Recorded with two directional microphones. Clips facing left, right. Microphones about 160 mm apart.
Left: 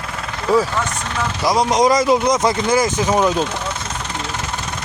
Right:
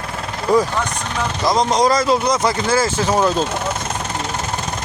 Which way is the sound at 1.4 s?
10° left (ahead or behind).